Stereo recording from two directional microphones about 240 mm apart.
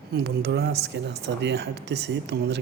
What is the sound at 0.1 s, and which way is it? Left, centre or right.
Speech, right.